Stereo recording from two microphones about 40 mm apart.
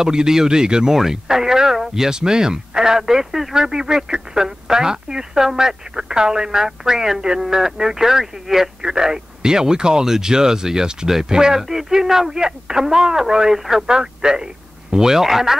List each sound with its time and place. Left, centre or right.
0.0 s speech: centre